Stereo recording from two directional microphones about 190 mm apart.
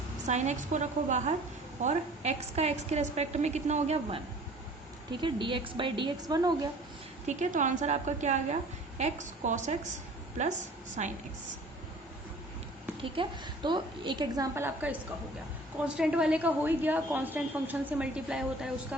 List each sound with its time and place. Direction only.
0.3 s a woman's voice: 40° right (ahead or behind)
5.2 s a woman's voice: 25° right (ahead or behind)
7.3 s a woman's voice: 40° right (ahead or behind)
11.0 s a woman's voice: 35° right (ahead or behind)
13.0 s a woman's voice: 25° right (ahead or behind); by 14.9 s 10° right (ahead or behind)
16.0 s a woman's voice: 5° right (ahead or behind)